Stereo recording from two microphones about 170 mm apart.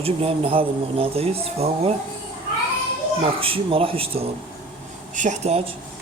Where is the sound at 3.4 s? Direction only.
30° right (ahead or behind).